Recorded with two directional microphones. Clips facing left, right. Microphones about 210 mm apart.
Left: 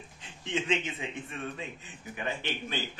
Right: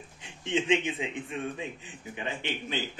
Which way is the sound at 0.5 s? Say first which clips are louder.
Right 4 dB; 15° right (ahead or behind).